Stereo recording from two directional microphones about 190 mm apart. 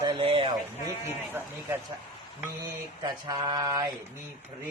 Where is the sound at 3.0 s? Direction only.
20° right (ahead or behind).